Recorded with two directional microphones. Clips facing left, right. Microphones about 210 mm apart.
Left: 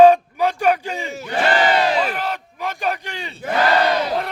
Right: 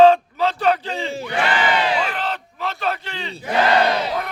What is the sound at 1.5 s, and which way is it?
Crowd, 40° left (ahead or behind).